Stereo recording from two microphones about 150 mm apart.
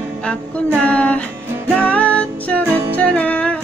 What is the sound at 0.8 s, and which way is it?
Music, 10° left (ahead or behind).